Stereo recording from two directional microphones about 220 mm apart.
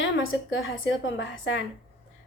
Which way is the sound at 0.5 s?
55° left (ahead or behind).